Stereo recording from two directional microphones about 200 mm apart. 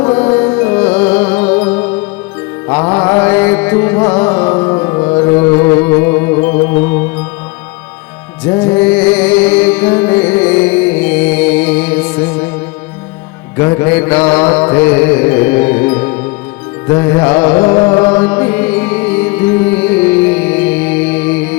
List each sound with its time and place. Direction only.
0.0 s music: 10° left (ahead or behind)
8.4 s music: 10° left (ahead or behind)
13.6 s music: 10° left (ahead or behind)